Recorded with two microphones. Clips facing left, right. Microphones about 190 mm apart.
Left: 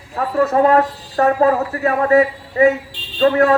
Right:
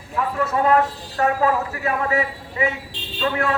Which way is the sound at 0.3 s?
40° left (ahead or behind).